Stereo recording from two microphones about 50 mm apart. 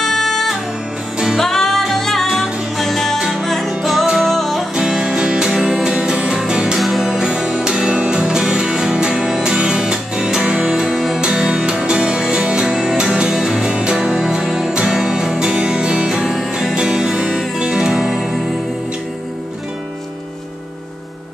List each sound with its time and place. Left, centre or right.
0.0 s music: centre
3.2 s music: centre
3.4 s music: centre
4.4 s music: centre
4.7 s music: centre
6.8 s music: centre
7.1 s music: centre
10.9 s music: centre
11.1 s music: centre
16.3 s music: centre
16.7 s music: centre